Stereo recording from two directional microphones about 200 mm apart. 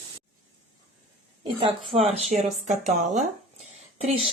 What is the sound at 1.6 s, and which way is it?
Speech, 30° right (ahead or behind).